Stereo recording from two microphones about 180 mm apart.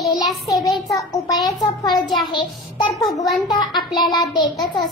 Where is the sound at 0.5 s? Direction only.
Centre (ahead or behind).